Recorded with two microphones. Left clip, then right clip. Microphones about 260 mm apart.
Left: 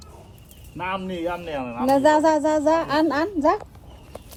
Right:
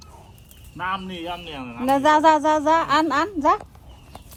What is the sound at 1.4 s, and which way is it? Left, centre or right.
Speech, right.